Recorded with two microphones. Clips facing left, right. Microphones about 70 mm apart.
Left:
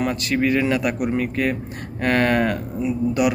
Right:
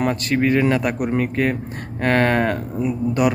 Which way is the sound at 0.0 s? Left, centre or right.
Right.